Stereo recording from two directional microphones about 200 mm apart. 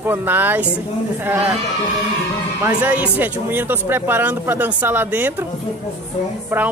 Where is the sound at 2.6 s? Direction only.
10° right (ahead or behind).